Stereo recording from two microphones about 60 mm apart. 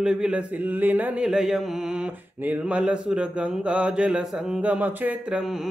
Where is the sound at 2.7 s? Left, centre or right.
Centre.